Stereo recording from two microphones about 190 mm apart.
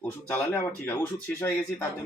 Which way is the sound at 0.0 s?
10° left (ahead or behind).